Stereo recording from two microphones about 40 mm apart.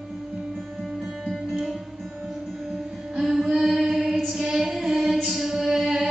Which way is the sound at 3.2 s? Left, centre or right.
Centre.